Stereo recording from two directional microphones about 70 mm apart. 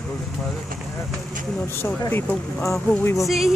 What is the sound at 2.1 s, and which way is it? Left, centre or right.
Speech, left.